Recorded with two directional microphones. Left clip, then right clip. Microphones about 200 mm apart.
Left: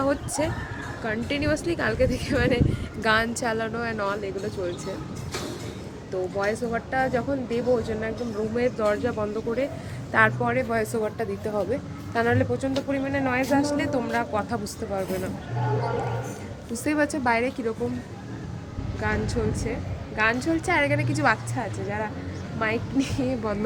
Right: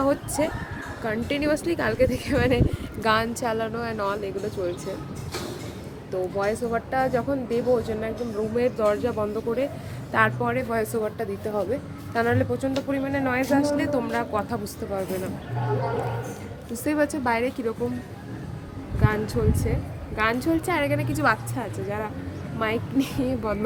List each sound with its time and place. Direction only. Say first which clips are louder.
0.0 s speech: right 2 dB; 20° right (ahead or behind)
3.4 s a woman's voice: even; centre (ahead or behind)
6.1 s speech: right 1 dB; 10° right (ahead or behind)
16.7 s a woman's voice: even; centre (ahead or behind)
19.0 s a woman's voice: right 2 dB; 15° right (ahead or behind)